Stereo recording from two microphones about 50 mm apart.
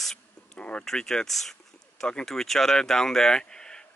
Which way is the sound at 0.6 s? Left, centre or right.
Left.